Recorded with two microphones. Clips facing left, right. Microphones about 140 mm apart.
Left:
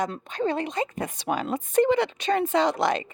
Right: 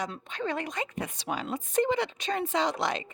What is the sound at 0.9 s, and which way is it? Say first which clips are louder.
Speech: left 5 dB; 50° left (ahead or behind).